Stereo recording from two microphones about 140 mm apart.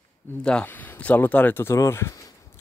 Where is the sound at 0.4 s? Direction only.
5° left (ahead or behind).